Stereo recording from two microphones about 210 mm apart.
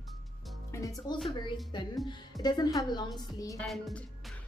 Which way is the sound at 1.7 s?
20° left (ahead or behind).